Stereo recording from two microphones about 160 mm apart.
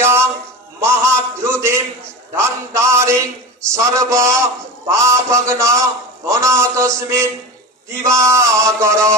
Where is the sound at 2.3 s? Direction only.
15° right (ahead or behind).